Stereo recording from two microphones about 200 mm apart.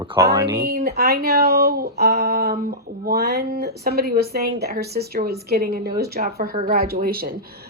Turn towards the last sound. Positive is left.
turn(degrees=-50)  # may be behind; listen again after turning